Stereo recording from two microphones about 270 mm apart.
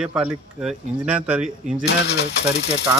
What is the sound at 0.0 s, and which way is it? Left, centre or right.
A man's voice, centre.